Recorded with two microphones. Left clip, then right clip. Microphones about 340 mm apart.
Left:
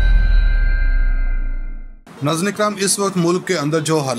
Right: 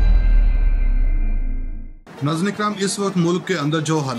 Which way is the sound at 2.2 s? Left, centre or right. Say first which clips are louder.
Left 4 dB; centre.